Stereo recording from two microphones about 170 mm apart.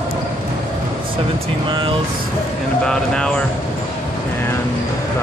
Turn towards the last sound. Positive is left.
turn(degrees=5)  # may be behind; listen again after turning